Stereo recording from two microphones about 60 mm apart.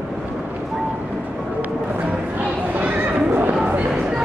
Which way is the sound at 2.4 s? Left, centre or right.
Right.